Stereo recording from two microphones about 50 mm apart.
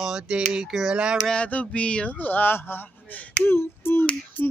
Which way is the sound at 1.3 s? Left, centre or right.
Left.